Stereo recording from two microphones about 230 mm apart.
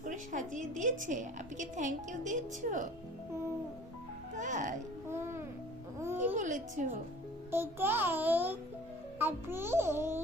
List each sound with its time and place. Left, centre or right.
0.0 s a woman's voice: right
4.4 s speech: right
5.0 s music: centre
6.3 s a woman's voice: right
7.5 s a child's voice: centre